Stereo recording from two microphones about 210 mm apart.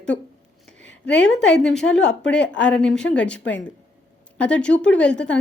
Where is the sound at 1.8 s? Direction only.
70° left (ahead or behind).